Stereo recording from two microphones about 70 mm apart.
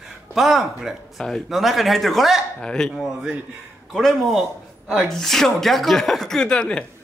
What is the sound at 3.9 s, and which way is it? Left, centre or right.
Speech, centre.